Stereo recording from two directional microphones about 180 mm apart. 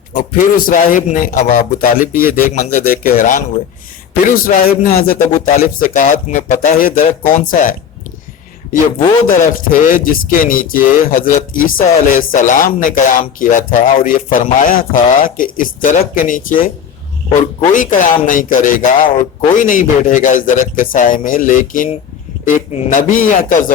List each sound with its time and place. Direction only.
0.1 s speech: 45° left (ahead or behind)
9.3 s speech: 50° left (ahead or behind)